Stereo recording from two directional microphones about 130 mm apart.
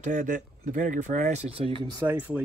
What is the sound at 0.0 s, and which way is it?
Speech, 65° right (ahead or behind).